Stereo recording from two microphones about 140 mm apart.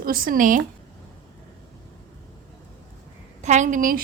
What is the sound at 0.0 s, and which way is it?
Speech, 90° right.